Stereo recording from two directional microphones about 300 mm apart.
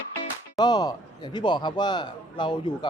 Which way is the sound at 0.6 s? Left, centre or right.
Centre.